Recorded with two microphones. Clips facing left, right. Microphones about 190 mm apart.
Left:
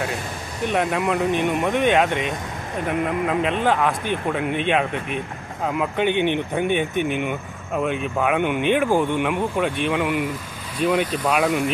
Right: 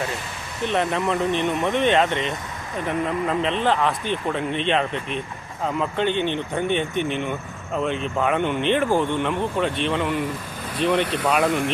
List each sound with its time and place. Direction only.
0.6 s a man's voice: 10° left (ahead or behind)